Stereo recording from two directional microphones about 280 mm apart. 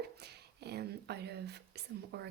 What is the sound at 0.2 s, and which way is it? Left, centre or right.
Speech, right.